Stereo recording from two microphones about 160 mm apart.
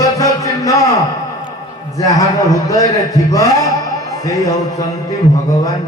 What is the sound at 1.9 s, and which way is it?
Speech, 20° left (ahead or behind).